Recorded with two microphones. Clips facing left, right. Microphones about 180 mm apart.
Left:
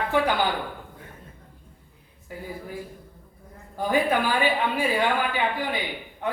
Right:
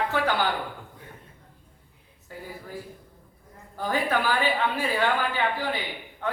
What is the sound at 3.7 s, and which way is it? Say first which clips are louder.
A man's voice: left 3 dB; 15° left (ahead or behind).